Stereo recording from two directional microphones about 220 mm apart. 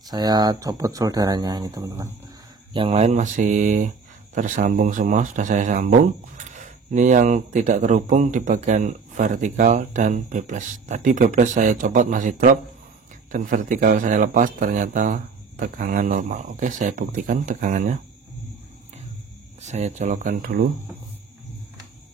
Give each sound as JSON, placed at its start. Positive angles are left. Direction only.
{"t": 0.1, "sound": "speech", "side_deg": -20}
{"t": 19.6, "sound": "speech", "side_deg": -30}